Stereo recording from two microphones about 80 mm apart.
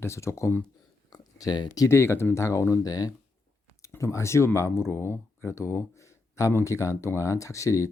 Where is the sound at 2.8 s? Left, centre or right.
Left.